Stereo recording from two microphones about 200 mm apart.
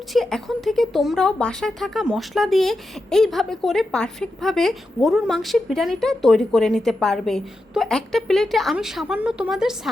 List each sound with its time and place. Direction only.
0.1 s speech: centre (ahead or behind)